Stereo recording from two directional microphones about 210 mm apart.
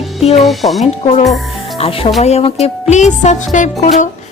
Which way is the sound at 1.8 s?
25° left (ahead or behind).